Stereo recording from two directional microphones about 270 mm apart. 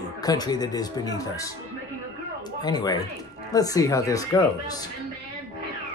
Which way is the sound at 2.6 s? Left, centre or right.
Centre.